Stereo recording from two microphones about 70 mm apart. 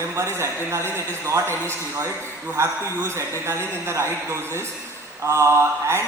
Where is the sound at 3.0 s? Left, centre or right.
Right.